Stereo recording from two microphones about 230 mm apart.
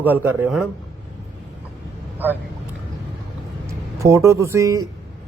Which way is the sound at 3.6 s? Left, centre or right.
Centre.